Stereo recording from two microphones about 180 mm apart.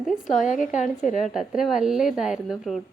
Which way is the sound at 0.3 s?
45° left (ahead or behind).